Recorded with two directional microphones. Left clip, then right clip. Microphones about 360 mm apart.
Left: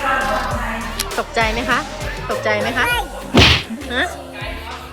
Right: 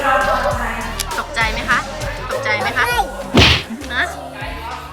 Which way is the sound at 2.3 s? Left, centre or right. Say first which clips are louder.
Right 1 dB; centre.